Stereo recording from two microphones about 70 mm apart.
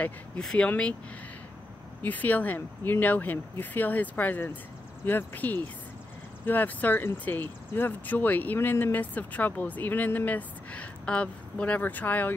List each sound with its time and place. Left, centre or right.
0.4 s speech: centre
2.0 s speech: left